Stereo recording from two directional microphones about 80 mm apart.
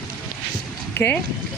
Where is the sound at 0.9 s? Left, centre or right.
Left.